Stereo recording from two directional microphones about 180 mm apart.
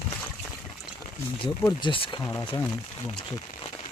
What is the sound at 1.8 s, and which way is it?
Speech, 30° left (ahead or behind).